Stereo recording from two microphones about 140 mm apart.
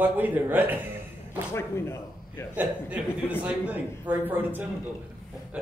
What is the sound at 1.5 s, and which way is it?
Speech, 20° left (ahead or behind).